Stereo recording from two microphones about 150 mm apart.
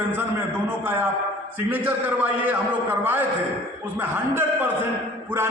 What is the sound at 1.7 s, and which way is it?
A man's voice, 10° right (ahead or behind).